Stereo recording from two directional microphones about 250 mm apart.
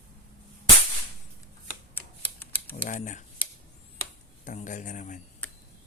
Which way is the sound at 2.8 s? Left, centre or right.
Left.